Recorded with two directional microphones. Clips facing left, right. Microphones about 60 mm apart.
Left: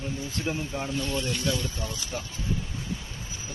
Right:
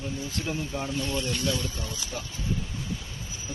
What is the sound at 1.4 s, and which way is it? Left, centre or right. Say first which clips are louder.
Speech: left 1 dB; centre.